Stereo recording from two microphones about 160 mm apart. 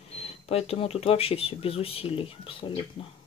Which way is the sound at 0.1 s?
40° left (ahead or behind).